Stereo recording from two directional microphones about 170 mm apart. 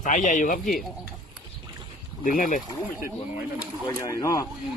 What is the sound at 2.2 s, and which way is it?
Speech, 50° left (ahead or behind).